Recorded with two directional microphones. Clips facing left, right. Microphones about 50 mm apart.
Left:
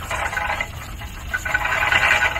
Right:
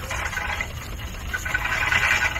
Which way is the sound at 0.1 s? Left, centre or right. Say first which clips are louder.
Left 5 dB; centre.